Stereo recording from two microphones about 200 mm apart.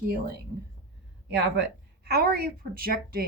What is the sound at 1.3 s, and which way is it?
Speech, 55° right (ahead or behind).